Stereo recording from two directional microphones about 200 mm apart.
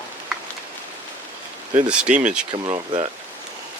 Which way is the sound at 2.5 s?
25° right (ahead or behind).